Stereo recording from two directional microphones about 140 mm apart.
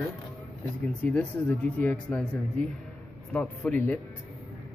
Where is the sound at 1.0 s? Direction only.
10° left (ahead or behind).